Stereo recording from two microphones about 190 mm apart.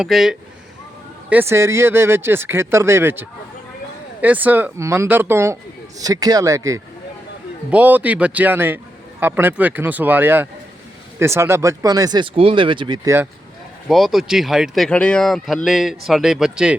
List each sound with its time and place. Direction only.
0.0 s speech: centre (ahead or behind); by 13.1 s 25° right (ahead or behind)
13.8 s speech: centre (ahead or behind)